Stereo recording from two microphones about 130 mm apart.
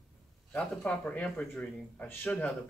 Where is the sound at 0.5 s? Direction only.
10° left (ahead or behind).